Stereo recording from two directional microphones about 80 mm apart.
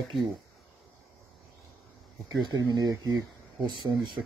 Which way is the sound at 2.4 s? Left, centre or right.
Right.